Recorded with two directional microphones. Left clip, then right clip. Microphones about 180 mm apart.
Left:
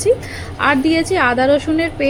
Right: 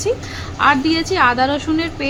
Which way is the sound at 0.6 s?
15° left (ahead or behind).